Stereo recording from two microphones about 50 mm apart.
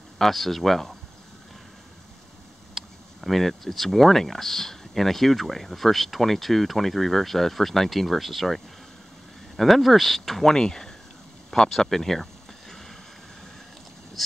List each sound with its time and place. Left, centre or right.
0.2 s speech: centre
2.7 s speech: centre
11.5 s a sound: centre